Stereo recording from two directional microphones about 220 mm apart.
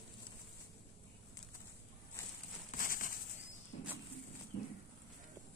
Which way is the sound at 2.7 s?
40° left (ahead or behind).